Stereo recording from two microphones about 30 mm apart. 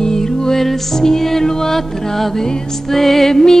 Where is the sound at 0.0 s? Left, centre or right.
Centre.